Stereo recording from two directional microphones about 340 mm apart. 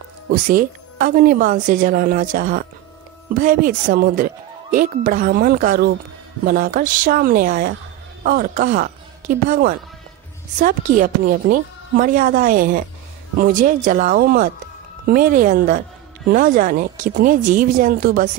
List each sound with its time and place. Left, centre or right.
0.3 s speech: right